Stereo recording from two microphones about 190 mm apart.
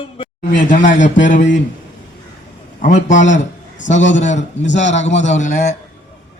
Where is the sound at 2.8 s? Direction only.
40° left (ahead or behind).